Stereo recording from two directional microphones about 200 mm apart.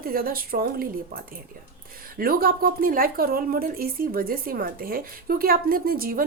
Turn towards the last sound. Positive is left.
turn(degrees=-45)  # may be behind; listen again after turning